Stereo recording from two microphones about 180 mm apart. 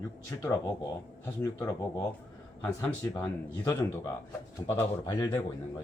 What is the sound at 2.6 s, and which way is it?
Speech, 10° left (ahead or behind).